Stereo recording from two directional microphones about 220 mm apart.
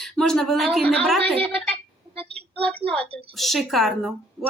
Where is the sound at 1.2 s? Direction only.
25° right (ahead or behind).